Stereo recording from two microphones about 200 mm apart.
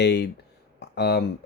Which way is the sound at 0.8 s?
55° left (ahead or behind).